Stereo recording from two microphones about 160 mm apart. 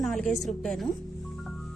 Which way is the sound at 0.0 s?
Centre (ahead or behind).